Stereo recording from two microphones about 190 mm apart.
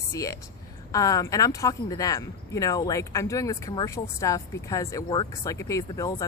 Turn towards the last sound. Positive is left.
turn(degrees=20)  # may be behind; listen again after turning